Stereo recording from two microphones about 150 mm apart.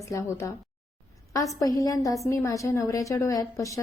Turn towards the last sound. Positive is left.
turn(degrees=20)  # may be behind; listen again after turning